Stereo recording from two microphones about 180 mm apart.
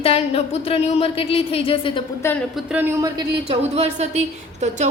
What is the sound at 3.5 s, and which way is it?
A woman's voice, 35° right (ahead or behind).